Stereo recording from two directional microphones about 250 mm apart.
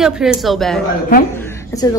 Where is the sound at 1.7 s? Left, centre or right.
Centre.